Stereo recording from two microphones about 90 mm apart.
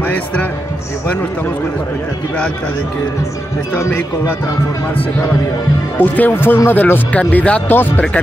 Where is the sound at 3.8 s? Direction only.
25° left (ahead or behind).